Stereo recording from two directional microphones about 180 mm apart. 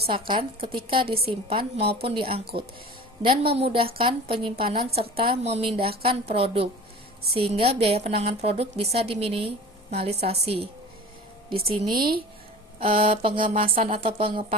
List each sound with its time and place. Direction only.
0.1 s a woman's voice: 25° right (ahead or behind)
2.4 s speech: 60° right (ahead or behind)
3.2 s a woman's voice: 30° right (ahead or behind)
11.9 s speech: 55° right (ahead or behind)
12.8 s a woman's voice: 30° right (ahead or behind)